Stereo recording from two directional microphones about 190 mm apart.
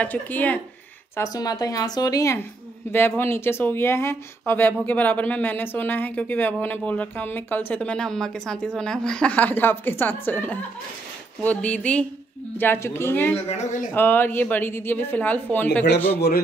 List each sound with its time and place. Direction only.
0.0 s speech: 10° left (ahead or behind)
13.5 s speech: 40° left (ahead or behind)
13.9 s speech: 10° left (ahead or behind)